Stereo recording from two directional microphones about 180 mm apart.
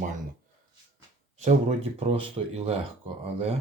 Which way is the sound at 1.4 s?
35° right (ahead or behind).